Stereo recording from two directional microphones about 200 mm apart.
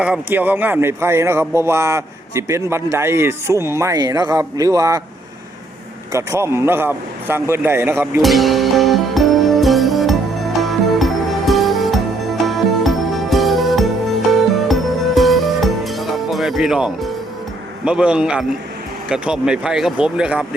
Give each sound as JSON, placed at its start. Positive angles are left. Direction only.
{"t": 0.0, "sound": "speech", "side_deg": -5}
{"t": 6.1, "sound": "speech", "side_deg": -15}
{"t": 8.2, "sound": "music", "side_deg": 0}
{"t": 17.8, "sound": "speech", "side_deg": -5}